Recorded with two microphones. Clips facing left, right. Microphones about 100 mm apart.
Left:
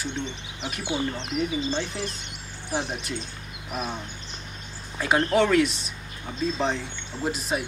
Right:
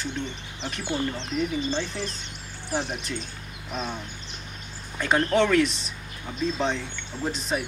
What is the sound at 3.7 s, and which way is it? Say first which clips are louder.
Speech: left 1 dB; 15° left (ahead or behind).